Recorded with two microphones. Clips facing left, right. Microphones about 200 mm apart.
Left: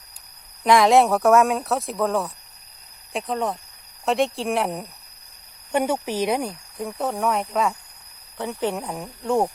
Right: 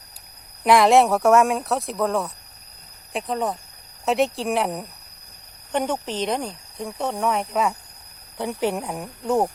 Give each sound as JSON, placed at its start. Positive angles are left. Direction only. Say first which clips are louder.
{"t": 0.6, "sound": "speech", "louder": "even", "side_deg": 0}